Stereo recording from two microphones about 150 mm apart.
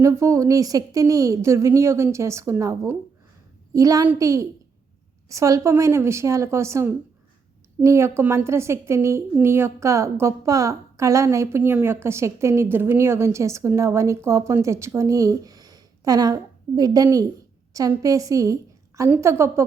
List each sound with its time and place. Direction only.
0.0 s a woman's voice: 20° right (ahead or behind)